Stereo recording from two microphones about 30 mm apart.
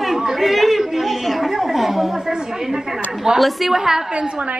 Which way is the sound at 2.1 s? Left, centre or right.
Right.